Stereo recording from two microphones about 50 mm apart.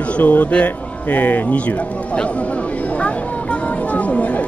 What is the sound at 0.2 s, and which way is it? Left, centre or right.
Speech, left.